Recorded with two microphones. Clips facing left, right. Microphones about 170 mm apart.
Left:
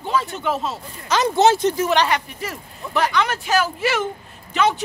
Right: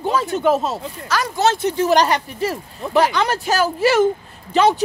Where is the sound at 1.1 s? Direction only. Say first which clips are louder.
Left 3 dB; 20° left (ahead or behind).